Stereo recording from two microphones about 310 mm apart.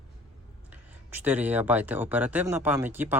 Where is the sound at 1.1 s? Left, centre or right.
Centre.